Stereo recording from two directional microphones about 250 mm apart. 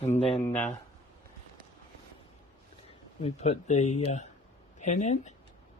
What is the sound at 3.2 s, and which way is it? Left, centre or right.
Speech, left.